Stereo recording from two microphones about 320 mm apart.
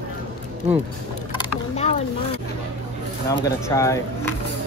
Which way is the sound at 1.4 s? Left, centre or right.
Centre.